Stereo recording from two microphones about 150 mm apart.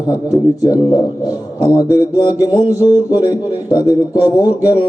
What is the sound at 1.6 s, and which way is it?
A man's voice, 25° left (ahead or behind).